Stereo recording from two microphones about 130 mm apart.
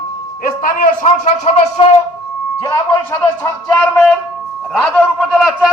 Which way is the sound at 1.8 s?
45° left (ahead or behind).